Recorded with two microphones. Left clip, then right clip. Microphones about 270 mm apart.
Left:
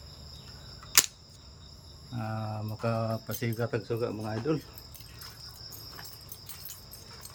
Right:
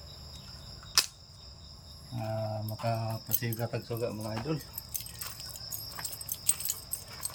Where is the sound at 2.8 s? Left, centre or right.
Centre.